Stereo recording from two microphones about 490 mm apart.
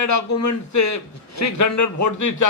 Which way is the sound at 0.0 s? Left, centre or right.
Left.